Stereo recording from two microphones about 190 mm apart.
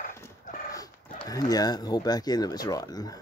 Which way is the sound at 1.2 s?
20° left (ahead or behind).